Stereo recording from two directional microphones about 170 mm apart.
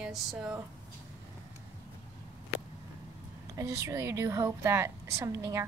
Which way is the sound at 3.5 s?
20° right (ahead or behind).